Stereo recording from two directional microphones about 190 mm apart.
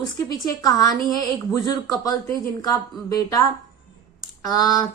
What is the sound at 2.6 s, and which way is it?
Speech, 20° left (ahead or behind).